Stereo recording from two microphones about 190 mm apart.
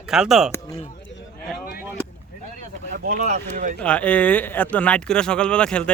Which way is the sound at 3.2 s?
40° right (ahead or behind).